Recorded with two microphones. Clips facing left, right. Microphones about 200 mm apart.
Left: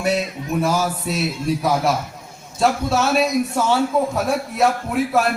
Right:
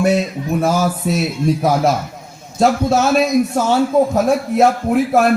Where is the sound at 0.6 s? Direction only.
50° right (ahead or behind).